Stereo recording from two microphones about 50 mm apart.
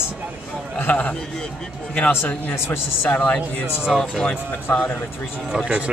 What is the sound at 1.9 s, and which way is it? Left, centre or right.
Speech, left.